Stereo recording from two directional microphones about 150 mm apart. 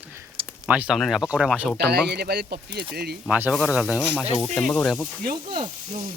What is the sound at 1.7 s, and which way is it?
Speech, 90° right.